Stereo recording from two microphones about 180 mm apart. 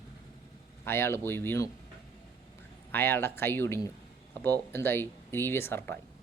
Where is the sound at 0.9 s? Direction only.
15° left (ahead or behind).